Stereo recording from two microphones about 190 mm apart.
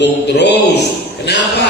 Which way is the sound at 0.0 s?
65° left (ahead or behind).